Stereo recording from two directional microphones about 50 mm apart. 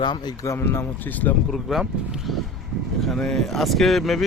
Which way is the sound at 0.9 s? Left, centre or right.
Left.